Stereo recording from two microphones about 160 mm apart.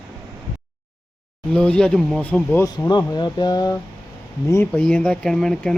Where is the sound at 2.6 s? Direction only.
25° left (ahead or behind).